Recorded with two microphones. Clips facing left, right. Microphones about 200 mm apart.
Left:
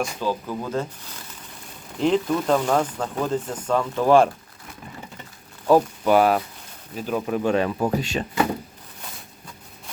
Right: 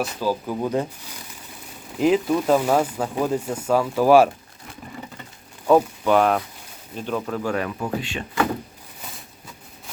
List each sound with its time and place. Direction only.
0.0 s speech: 10° right (ahead or behind)
5.6 s speech: 5° left (ahead or behind)
7.3 s speech: 25° left (ahead or behind)
7.8 s speech: 40° left (ahead or behind)